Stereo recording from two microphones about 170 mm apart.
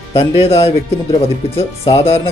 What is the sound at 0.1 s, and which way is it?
Speech, 35° left (ahead or behind).